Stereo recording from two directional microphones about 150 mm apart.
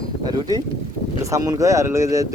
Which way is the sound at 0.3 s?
25° right (ahead or behind).